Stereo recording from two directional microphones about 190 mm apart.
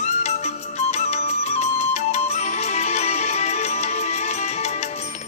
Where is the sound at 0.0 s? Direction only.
35° left (ahead or behind).